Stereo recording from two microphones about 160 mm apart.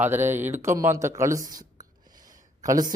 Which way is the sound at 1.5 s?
25° right (ahead or behind).